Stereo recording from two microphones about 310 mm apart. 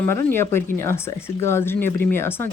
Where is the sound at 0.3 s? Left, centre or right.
Centre.